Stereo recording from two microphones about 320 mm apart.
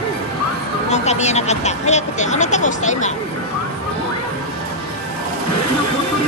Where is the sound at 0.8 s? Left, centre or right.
Left.